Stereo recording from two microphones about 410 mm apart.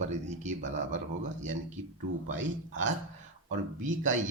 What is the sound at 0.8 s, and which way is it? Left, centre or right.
Speech, right.